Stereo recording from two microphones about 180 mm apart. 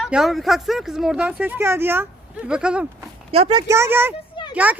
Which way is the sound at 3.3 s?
30° right (ahead or behind).